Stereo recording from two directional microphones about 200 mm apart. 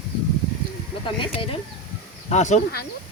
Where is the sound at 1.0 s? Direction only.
25° left (ahead or behind).